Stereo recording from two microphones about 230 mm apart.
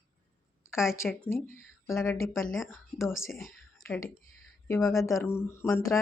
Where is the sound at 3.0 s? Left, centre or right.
Centre.